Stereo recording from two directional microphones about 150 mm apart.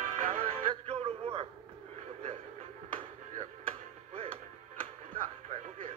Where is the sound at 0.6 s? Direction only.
40° right (ahead or behind).